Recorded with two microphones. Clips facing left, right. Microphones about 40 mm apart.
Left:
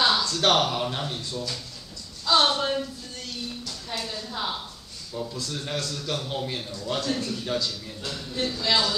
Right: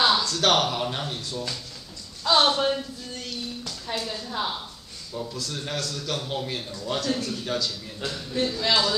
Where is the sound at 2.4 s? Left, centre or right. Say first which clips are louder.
Right 2 dB; centre.